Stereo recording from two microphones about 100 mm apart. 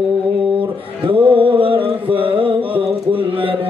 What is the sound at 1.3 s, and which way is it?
Music, 65° right (ahead or behind).